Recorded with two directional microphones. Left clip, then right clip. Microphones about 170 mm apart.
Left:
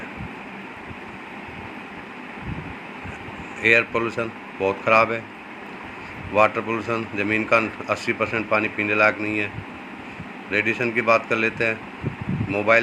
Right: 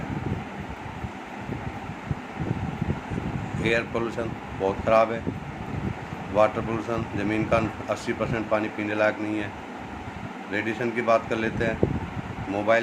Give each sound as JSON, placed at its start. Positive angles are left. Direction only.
{"t": 3.6, "sound": "speech", "side_deg": 20}
{"t": 6.3, "sound": "speech", "side_deg": 20}
{"t": 10.5, "sound": "speech", "side_deg": 20}